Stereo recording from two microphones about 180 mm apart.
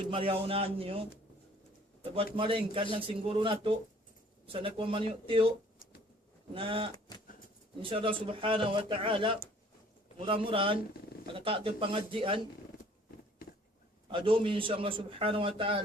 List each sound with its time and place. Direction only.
0.1 s a man's voice: 30° right (ahead or behind)
2.3 s a man's voice: 30° right (ahead or behind)
6.5 s a man's voice: 30° right (ahead or behind)
14.1 s a man's voice: 30° right (ahead or behind)